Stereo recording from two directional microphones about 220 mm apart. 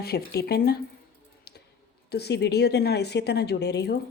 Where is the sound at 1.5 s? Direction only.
45° left (ahead or behind).